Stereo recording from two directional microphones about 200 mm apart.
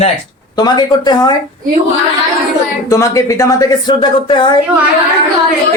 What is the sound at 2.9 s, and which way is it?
A woman's voice, 15° left (ahead or behind).